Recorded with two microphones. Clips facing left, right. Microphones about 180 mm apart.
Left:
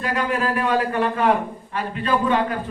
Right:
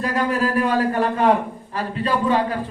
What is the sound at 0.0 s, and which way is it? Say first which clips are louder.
A man's voice: right 2 dB; 40° right (ahead or behind).